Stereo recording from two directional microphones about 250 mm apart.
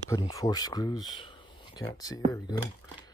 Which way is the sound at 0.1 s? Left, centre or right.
Centre.